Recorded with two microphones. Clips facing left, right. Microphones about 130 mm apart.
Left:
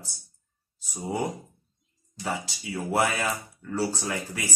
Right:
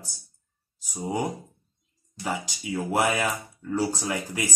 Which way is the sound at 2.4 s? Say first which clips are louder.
Right 3 dB; 15° right (ahead or behind).